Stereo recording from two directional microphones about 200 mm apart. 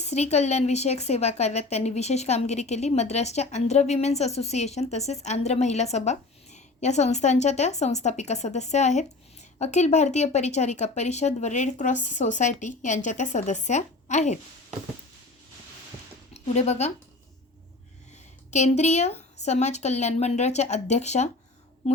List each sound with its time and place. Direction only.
0.0 s a woman's voice: 35° left (ahead or behind)
16.3 s a woman's voice: 35° left (ahead or behind)
18.1 s a woman's voice: 35° left (ahead or behind)